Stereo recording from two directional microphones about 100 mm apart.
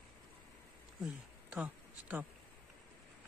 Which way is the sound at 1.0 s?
10° right (ahead or behind).